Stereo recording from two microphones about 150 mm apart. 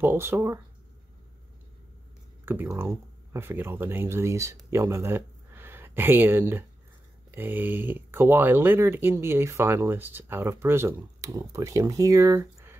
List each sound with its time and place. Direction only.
0.0 s speech: 15° right (ahead or behind)
2.4 s speech: 15° right (ahead or behind)